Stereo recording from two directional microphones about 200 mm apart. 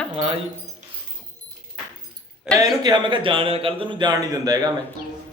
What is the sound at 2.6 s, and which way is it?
A man's voice, 20° right (ahead or behind).